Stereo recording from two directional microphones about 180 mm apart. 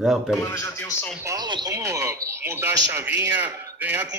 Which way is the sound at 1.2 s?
20° right (ahead or behind).